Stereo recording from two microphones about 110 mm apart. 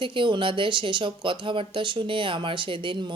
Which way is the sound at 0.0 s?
50° right (ahead or behind).